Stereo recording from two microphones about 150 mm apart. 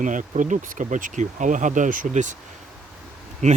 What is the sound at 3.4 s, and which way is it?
Speech, 50° right (ahead or behind).